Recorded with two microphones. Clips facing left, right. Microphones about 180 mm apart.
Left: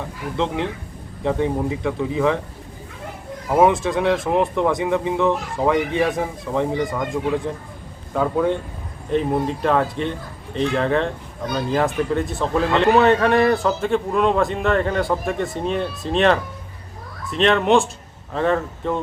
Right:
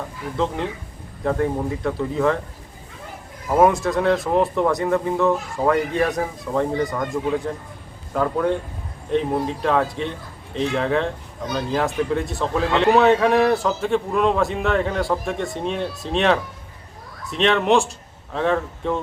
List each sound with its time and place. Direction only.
0.3 s speech: 15° left (ahead or behind)
3.5 s speech: 5° left (ahead or behind)
4.3 s speech: 15° left (ahead or behind)
4.6 s a man's voice: 5° left (ahead or behind)
5.1 s speech: 15° left (ahead or behind)
5.6 s a man's voice: centre (ahead or behind)